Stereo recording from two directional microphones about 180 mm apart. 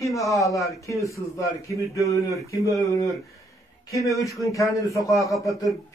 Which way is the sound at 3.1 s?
15° left (ahead or behind).